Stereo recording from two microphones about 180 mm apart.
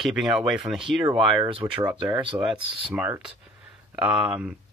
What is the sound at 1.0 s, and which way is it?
Speech, 25° right (ahead or behind).